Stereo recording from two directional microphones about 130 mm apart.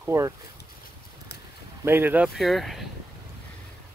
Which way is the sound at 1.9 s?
15° right (ahead or behind).